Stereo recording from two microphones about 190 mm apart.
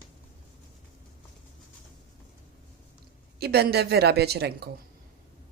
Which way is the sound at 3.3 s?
55° right (ahead or behind).